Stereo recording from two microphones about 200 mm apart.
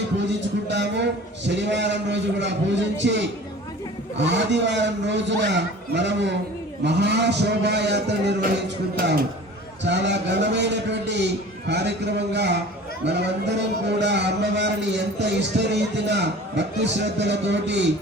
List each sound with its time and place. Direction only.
0.3 s a man's voice: 60° right (ahead or behind)